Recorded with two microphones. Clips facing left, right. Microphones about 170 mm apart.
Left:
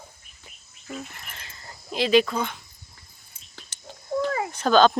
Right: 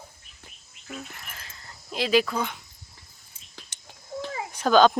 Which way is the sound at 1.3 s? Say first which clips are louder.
Left 2 dB; centre (ahead or behind).